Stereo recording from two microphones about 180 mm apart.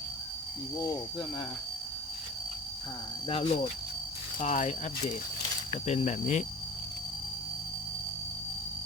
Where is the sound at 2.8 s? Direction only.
25° left (ahead or behind).